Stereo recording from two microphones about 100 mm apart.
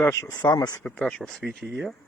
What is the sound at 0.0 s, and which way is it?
Speech, 25° left (ahead or behind).